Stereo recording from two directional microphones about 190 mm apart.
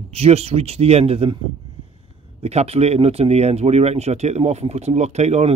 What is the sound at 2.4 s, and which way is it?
Speech, 35° right (ahead or behind).